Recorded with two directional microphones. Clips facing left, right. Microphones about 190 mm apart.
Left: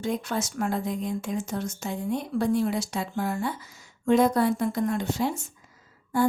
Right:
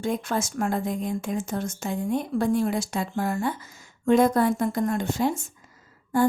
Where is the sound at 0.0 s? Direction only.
50° right (ahead or behind).